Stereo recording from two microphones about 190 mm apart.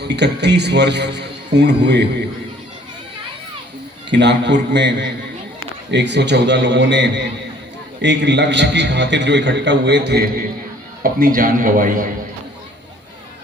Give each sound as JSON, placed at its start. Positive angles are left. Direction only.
{"t": 0.0, "sound": "a man's voice", "side_deg": -60}
{"t": 4.1, "sound": "a man's voice", "side_deg": -65}
{"t": 11.0, "sound": "a man's voice", "side_deg": -45}